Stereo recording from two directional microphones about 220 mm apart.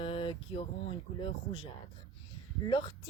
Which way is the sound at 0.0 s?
25° left (ahead or behind).